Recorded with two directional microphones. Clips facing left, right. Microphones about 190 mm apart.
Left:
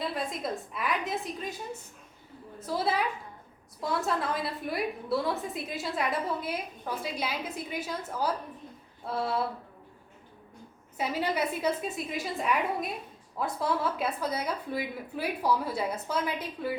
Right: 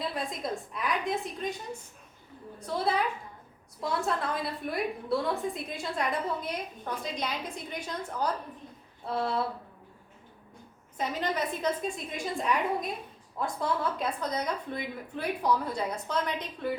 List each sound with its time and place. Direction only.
0.0 s a woman's voice: centre (ahead or behind)
2.6 s a woman's voice: 5° left (ahead or behind)
10.9 s a woman's voice: 10° left (ahead or behind)